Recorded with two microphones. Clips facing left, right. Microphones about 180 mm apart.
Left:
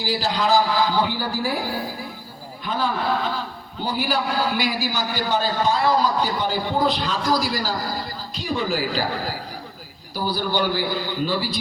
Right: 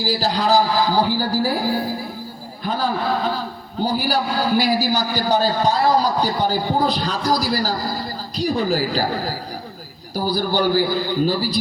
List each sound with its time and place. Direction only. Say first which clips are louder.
0.0 s a man's voice: right 2 dB; 40° right (ahead or behind)
2.6 s a man's voice: right 2 dB; 40° right (ahead or behind)